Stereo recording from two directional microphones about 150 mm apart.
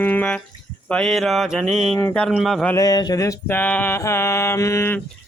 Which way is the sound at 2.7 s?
25° left (ahead or behind).